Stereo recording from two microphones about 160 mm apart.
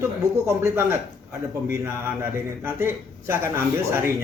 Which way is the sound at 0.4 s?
15° right (ahead or behind).